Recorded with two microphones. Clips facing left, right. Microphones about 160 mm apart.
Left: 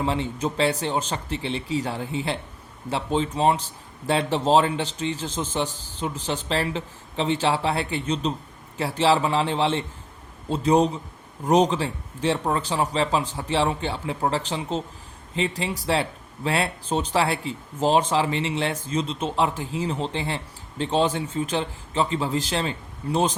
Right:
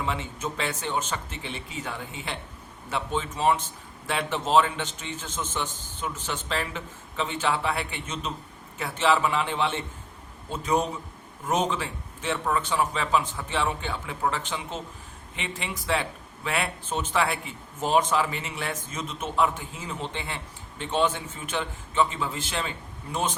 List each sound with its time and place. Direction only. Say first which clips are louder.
0.0 s speech: left 6 dB; 35° left (ahead or behind)